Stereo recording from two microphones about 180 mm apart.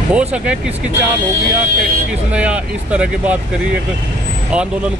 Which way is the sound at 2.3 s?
5° right (ahead or behind).